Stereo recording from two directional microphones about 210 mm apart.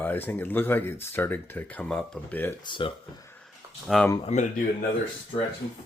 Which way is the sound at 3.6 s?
15° right (ahead or behind).